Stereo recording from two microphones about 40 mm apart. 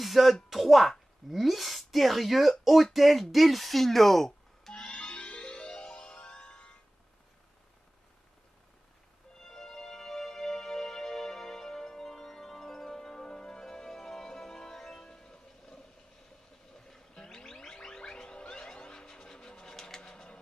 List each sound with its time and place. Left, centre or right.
0.0 s a woman's voice: centre
4.7 s music: left
9.4 s music: centre
15.0 s train: centre
16.7 s music: centre
19.7 s a sound: centre